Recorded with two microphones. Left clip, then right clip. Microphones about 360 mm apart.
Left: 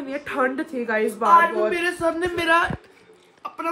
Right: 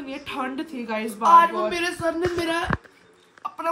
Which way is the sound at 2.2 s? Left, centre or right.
Centre.